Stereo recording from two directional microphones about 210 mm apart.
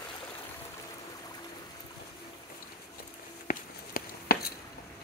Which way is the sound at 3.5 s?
45° left (ahead or behind).